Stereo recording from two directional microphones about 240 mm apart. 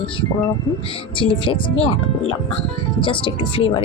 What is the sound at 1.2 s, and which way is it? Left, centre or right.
Speech, left.